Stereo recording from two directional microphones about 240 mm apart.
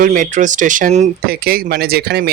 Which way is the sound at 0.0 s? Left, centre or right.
Right.